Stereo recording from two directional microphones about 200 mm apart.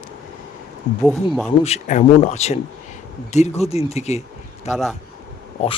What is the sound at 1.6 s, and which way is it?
Speech, 35° left (ahead or behind).